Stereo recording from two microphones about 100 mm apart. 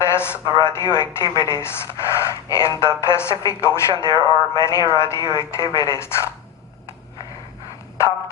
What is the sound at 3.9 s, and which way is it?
Speech, 45° right (ahead or behind).